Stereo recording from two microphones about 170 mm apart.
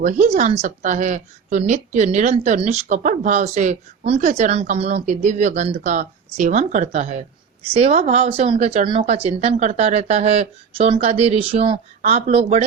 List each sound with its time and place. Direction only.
0.0 s a woman's voice: 45° right (ahead or behind)